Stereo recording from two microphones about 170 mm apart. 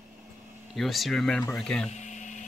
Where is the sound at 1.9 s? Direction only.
45° left (ahead or behind).